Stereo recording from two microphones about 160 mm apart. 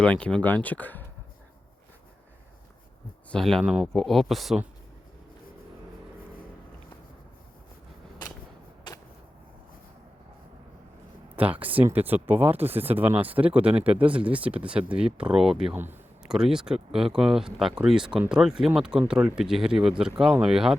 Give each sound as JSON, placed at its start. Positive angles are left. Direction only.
{"t": 0.0, "sound": "speech", "side_deg": 5}
{"t": 3.3, "sound": "speech", "side_deg": 5}
{"t": 8.9, "sound": "vehicle", "side_deg": 30}
{"t": 11.6, "sound": "speech", "side_deg": -10}